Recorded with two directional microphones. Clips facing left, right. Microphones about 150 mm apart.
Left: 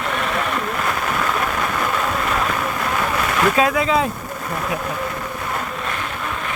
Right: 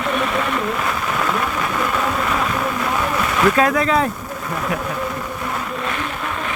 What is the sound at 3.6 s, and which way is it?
Speech, 15° left (ahead or behind).